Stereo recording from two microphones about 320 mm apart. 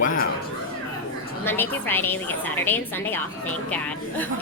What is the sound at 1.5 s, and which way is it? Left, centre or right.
A woman's voice, centre.